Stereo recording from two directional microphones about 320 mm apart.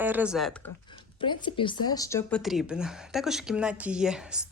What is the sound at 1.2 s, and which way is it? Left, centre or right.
Speech, centre.